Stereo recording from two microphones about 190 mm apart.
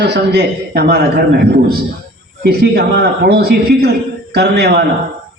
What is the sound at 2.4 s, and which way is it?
A man's voice, 55° right (ahead or behind).